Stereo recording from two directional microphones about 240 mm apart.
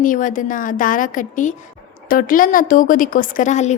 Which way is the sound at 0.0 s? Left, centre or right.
Left.